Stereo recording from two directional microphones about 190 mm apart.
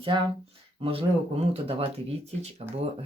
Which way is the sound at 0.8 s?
30° right (ahead or behind).